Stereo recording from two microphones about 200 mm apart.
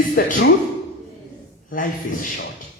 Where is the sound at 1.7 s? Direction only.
45° left (ahead or behind).